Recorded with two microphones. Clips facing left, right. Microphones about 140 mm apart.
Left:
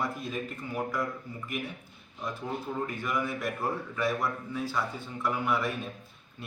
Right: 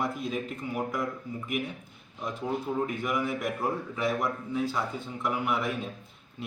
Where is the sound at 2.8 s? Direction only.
15° right (ahead or behind).